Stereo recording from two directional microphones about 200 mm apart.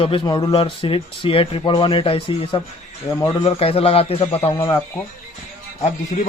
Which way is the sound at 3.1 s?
15° left (ahead or behind).